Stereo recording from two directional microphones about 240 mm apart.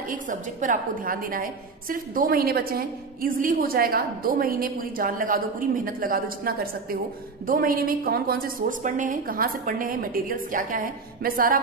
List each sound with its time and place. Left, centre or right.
0.1 s a woman's voice: right